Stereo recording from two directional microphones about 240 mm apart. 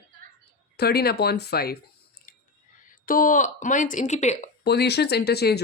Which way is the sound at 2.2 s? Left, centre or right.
Left.